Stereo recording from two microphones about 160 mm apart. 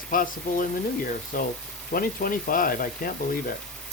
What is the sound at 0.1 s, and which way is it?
Speech, 60° left (ahead or behind).